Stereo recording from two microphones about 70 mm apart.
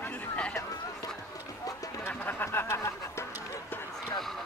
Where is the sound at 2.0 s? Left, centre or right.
Left.